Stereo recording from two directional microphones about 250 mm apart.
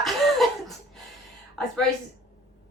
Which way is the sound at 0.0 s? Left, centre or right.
Centre.